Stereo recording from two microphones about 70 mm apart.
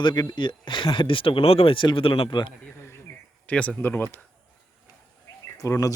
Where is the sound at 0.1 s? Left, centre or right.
Left.